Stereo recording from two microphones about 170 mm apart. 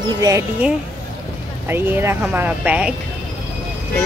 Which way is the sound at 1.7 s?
10° right (ahead or behind).